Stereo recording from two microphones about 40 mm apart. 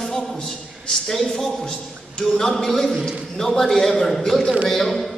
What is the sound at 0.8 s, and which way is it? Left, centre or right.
A man's voice, centre.